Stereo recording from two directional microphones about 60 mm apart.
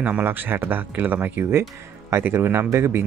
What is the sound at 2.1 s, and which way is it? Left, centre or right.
Speech, right.